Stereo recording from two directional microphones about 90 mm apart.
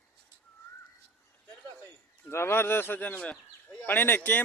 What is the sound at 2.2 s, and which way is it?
A man's voice, 25° left (ahead or behind).